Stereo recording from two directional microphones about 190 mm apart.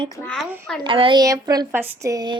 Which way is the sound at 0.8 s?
25° right (ahead or behind).